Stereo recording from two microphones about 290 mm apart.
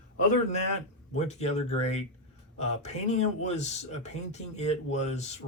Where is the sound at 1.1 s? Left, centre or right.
Left.